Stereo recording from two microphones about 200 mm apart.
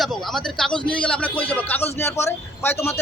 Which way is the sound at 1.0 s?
5° left (ahead or behind).